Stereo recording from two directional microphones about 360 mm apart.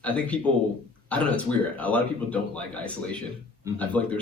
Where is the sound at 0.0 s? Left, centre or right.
Centre.